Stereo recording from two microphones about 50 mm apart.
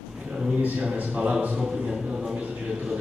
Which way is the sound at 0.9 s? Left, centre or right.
Right.